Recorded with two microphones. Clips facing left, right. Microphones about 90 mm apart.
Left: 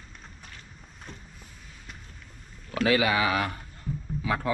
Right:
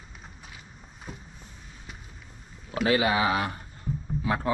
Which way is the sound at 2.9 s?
30° right (ahead or behind).